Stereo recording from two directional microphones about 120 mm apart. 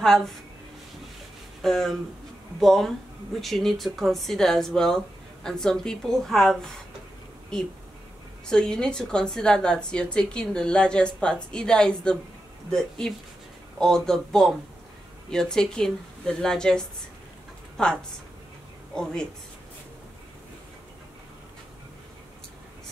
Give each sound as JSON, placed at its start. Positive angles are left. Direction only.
{"t": 0.0, "sound": "speech", "side_deg": 5}
{"t": 1.6, "sound": "speech", "side_deg": 0}
{"t": 8.5, "sound": "a woman's voice", "side_deg": 5}